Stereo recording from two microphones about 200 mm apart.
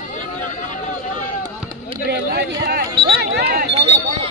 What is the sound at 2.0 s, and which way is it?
Speech, 55° right (ahead or behind).